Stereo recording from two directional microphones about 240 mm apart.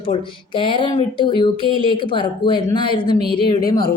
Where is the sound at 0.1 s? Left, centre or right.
Left.